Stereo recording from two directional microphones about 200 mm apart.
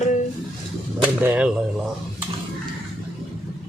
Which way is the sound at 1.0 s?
5° right (ahead or behind).